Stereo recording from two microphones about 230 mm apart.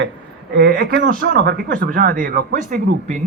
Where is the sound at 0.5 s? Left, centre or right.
Right.